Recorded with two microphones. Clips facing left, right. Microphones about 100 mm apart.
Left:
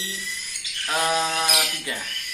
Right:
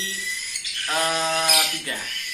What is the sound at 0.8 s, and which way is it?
Bird, 5° left (ahead or behind).